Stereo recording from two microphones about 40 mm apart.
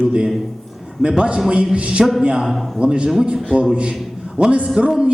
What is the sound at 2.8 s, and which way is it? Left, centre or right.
Speech, right.